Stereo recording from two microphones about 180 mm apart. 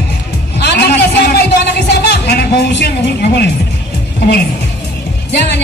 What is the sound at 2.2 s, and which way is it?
Speech, 60° left (ahead or behind).